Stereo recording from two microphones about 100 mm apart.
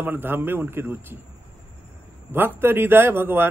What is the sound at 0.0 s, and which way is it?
Speech, 20° right (ahead or behind).